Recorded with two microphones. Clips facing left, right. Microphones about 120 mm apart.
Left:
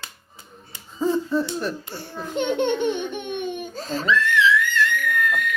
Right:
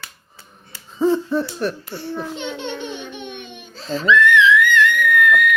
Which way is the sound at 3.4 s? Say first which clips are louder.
Left 3 dB; 50° left (ahead or behind).